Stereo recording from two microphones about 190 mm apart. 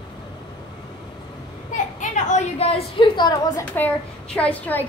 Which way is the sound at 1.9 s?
40° left (ahead or behind).